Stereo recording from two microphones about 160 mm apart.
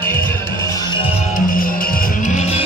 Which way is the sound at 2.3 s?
40° left (ahead or behind).